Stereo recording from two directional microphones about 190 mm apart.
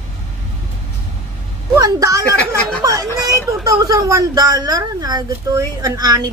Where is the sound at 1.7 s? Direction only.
20° right (ahead or behind).